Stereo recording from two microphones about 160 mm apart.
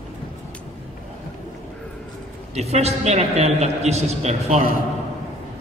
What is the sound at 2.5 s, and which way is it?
A man's voice, 40° right (ahead or behind).